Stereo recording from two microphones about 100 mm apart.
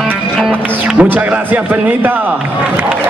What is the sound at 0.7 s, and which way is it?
A man's voice, 15° right (ahead or behind).